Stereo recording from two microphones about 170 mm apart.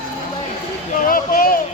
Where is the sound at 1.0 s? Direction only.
55° left (ahead or behind).